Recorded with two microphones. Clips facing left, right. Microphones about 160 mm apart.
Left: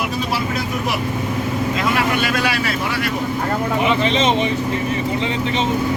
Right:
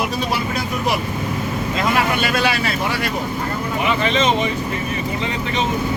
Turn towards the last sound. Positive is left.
turn(degrees=25)  # may be behind; listen again after turning